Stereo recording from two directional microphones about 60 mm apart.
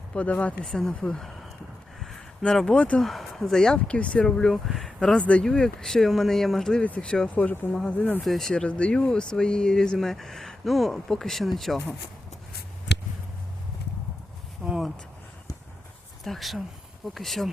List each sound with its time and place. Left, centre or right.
0.1 s speech: left
0.6 s speech: centre
2.6 s speech: left
3.0 s speech: centre
3.9 s speech: centre
5.1 s speech: centre
6.8 s speech: centre
7.9 s speech: left
8.2 s speech: centre
8.5 s speech: centre
14.6 s a sound: centre
16.2 s speech: centre